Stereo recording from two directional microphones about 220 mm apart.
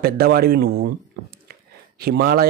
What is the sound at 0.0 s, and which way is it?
Speech, 45° right (ahead or behind).